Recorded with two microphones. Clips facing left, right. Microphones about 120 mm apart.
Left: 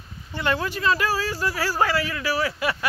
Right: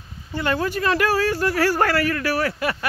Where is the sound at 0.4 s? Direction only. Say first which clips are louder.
Right 2 dB; 40° right (ahead or behind).